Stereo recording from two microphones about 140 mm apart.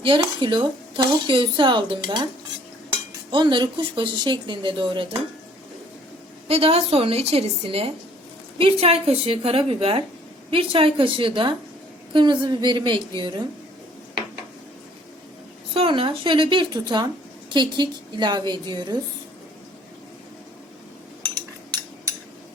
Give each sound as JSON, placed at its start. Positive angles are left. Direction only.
{"t": 0.0, "sound": "speech", "side_deg": -35}
{"t": 3.3, "sound": "speech", "side_deg": -35}
{"t": 6.5, "sound": "a woman's voice", "side_deg": -45}
{"t": 15.7, "sound": "speech", "side_deg": -40}